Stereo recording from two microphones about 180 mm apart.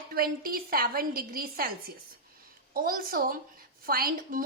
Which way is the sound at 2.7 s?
55° right (ahead or behind).